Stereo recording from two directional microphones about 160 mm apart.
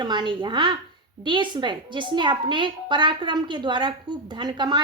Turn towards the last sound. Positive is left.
turn(degrees=-30)  # may be behind; listen again after turning